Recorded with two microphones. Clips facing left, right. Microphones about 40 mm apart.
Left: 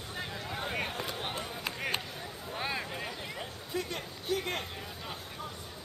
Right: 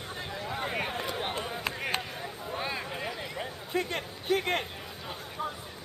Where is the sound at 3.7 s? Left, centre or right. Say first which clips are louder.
Right 5 dB; right.